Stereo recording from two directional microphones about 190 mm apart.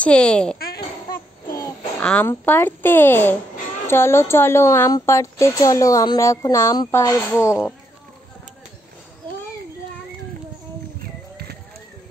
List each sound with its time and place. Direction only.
0.0 s a child's voice: 5° left (ahead or behind)
1.5 s child singing: 15° left (ahead or behind)
2.0 s a woman's voice: 10° left (ahead or behind)